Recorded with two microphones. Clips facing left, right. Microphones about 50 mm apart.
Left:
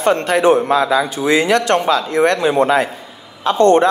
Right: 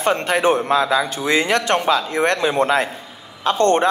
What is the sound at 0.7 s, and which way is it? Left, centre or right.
Speech, left.